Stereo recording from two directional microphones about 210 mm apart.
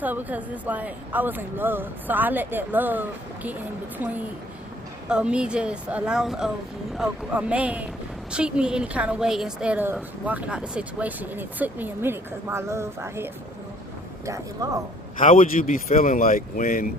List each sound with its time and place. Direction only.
0.0 s a woman's voice: 10° right (ahead or behind)
15.2 s speech: 40° left (ahead or behind)